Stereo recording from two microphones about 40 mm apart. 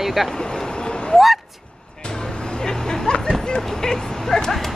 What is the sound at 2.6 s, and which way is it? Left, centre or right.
Vehicle, centre.